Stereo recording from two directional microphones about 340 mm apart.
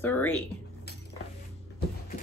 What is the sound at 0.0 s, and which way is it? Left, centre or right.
Speech, centre.